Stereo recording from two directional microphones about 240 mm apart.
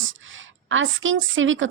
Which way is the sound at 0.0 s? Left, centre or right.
Right.